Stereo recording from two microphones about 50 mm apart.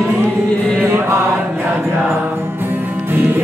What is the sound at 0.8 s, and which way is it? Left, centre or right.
Mantra, right.